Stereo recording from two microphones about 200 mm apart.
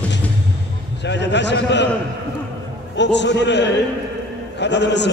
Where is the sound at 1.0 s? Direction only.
60° left (ahead or behind).